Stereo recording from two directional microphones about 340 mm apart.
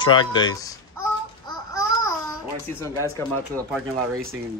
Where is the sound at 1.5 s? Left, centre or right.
Centre.